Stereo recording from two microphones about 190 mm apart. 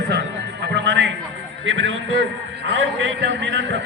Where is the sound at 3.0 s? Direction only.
65° right (ahead or behind).